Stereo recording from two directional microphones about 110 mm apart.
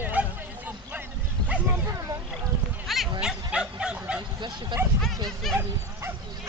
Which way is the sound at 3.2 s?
10° right (ahead or behind).